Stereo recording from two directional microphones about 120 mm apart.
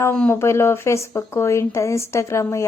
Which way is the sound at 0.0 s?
15° left (ahead or behind).